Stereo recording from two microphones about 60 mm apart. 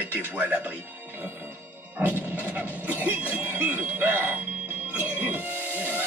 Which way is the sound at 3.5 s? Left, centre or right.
Right.